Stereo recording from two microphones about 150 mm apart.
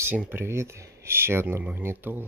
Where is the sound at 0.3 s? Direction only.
15° right (ahead or behind).